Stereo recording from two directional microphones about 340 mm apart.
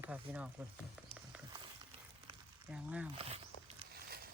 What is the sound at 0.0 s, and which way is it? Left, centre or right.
Speech, centre.